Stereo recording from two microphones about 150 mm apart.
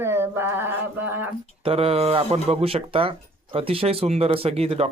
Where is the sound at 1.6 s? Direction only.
40° right (ahead or behind).